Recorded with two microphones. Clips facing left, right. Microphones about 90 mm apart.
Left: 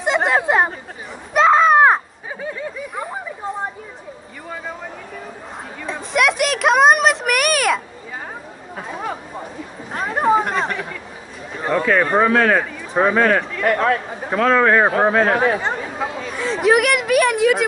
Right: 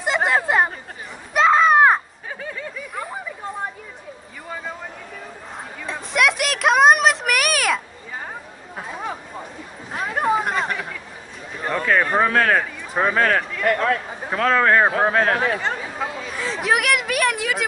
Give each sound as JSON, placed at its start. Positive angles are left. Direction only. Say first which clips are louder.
{"t": 0.0, "sound": "chatter", "louder": "left 2 dB", "side_deg": 0}
{"t": 1.3, "sound": "a sound", "louder": "left 2 dB", "side_deg": 0}
{"t": 5.9, "sound": "a sound", "louder": "left 2 dB", "side_deg": 0}
{"t": 8.7, "sound": "chatter", "louder": "left 2 dB", "side_deg": 0}
{"t": 11.8, "sound": "speech", "louder": "left 2 dB", "side_deg": 0}
{"t": 12.3, "sound": "speech", "louder": "left 3 dB", "side_deg": 20}
{"t": 13.7, "sound": "speech", "louder": "left 2 dB", "side_deg": 30}
{"t": 14.0, "sound": "a sound", "louder": "left 4 dB", "side_deg": 0}
{"t": 14.5, "sound": "speech", "louder": "left 2 dB", "side_deg": 10}
{"t": 15.8, "sound": "chatter", "louder": "left 3 dB", "side_deg": 0}